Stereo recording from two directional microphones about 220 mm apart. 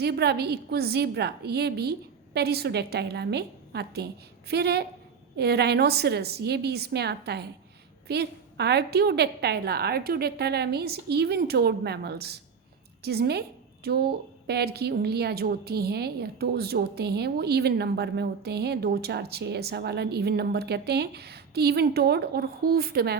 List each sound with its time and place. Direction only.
0.0 s a woman's voice: 50° right (ahead or behind)